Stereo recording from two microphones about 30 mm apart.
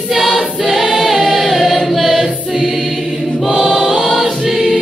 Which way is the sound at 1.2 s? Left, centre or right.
Centre.